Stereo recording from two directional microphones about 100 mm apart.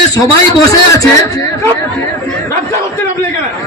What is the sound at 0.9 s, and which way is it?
Speech, 30° left (ahead or behind).